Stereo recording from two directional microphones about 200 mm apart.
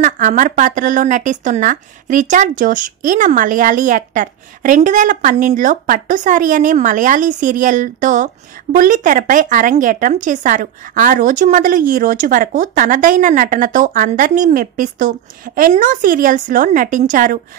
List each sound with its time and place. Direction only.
0.0 s speech: 40° right (ahead or behind)